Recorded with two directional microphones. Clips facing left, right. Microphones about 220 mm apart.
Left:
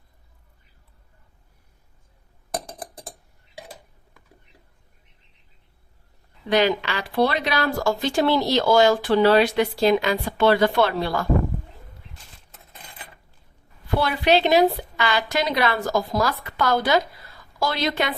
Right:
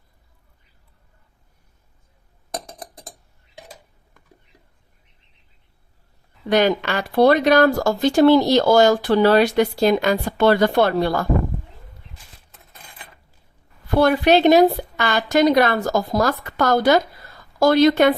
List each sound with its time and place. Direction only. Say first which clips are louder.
6.5 s speech: right 3 dB; 50° right (ahead or behind)
14.0 s speech: right 6 dB; 45° right (ahead or behind)